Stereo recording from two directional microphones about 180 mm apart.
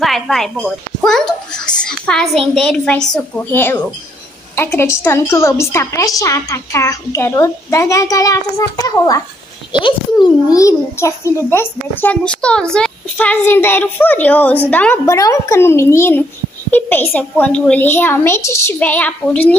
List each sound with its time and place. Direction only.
0.0 s a child's voice: centre (ahead or behind)